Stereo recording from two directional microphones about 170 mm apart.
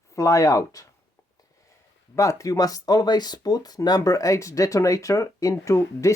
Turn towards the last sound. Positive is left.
turn(degrees=15)  # may be behind; listen again after turning